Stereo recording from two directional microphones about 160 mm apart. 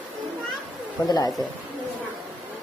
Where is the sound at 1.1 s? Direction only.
25° left (ahead or behind).